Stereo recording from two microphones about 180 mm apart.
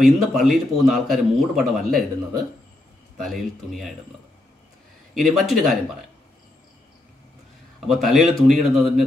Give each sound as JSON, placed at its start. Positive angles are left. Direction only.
{"t": 0.0, "sound": "a man's voice", "side_deg": 0}
{"t": 5.1, "sound": "a man's voice", "side_deg": 0}
{"t": 7.8, "sound": "a man's voice", "side_deg": 0}